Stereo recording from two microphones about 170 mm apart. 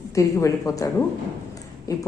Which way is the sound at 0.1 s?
20° left (ahead or behind).